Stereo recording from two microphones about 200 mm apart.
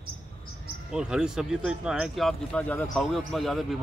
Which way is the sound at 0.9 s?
5° right (ahead or behind).